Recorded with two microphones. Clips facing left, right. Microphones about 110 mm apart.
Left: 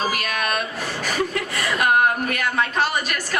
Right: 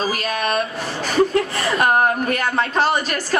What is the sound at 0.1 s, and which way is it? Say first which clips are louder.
A woman's voice: right 3 dB; 35° right (ahead or behind).